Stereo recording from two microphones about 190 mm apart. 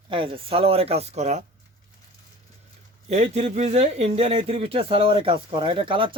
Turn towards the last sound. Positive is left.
turn(degrees=-25)  # may be behind; listen again after turning